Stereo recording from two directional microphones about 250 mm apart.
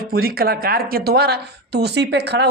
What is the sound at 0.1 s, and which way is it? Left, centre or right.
A woman's voice, right.